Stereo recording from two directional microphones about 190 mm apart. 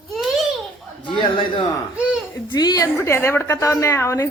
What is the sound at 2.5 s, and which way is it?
A woman's voice, 20° left (ahead or behind).